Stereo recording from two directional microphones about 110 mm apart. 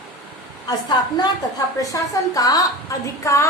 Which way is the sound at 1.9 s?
35° left (ahead or behind).